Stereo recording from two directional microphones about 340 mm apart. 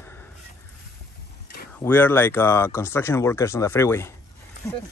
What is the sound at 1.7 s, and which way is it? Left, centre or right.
Speech, centre.